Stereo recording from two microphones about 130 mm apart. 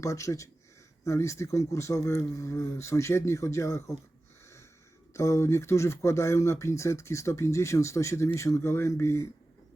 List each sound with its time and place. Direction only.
0.0 s speech: 25° left (ahead or behind)
5.1 s speech: 20° left (ahead or behind)